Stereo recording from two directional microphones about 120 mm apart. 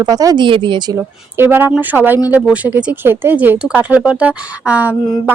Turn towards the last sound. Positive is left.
turn(degrees=-15)  # may be behind; listen again after turning